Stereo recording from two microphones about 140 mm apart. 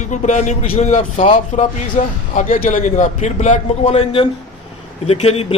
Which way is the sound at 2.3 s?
75° left (ahead or behind).